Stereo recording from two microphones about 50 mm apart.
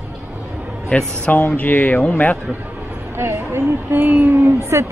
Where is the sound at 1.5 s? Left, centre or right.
Left.